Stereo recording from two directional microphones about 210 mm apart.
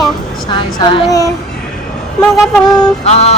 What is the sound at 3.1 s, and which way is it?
Speech, 30° left (ahead or behind).